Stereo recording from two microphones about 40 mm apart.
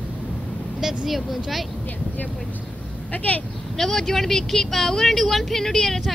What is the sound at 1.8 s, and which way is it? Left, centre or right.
Speech, left.